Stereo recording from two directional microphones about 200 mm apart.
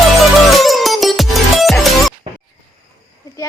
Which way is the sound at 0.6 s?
Centre (ahead or behind).